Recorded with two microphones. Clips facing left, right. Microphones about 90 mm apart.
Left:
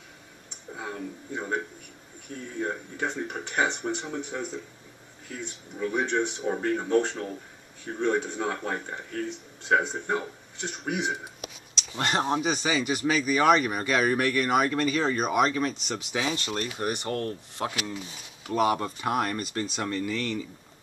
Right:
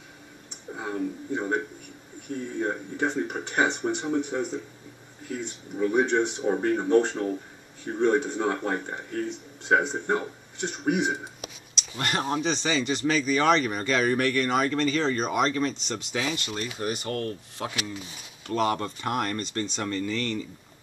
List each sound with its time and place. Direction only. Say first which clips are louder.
0.7 s a man's voice: right 5 dB; 15° right (ahead or behind)
12.0 s speech: left 2 dB; 25° left (ahead or behind)
12.4 s speech: even; 10° left (ahead or behind)
16.5 s speech: left 1 dB; 50° left (ahead or behind)
17.2 s speech: left 1 dB; 20° left (ahead or behind)
18.4 s speech: left 1 dB; 10° left (ahead or behind)